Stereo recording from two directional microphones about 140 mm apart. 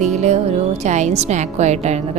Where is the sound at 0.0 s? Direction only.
55° right (ahead or behind).